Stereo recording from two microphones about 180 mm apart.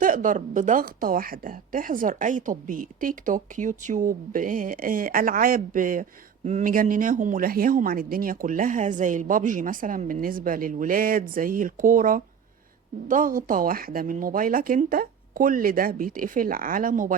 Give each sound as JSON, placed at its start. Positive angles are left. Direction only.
{"t": 0.0, "sound": "a woman's voice", "side_deg": -50}